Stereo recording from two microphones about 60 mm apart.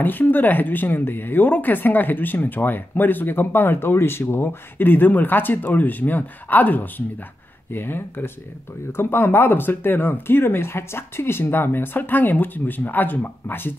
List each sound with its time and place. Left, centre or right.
0.0 s speech: left